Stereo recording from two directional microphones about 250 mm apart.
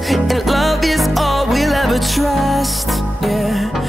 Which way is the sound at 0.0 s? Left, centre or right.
Centre.